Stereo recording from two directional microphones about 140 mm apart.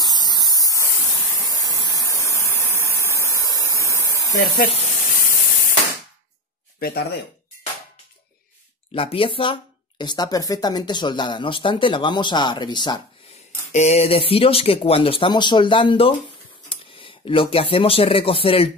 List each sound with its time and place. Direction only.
0.0 s a sound: 30° left (ahead or behind)
4.6 s speech: 50° left (ahead or behind)
4.9 s spray: 80° left
8.9 s speech: 40° left (ahead or behind)
13.7 s speech: 50° left (ahead or behind)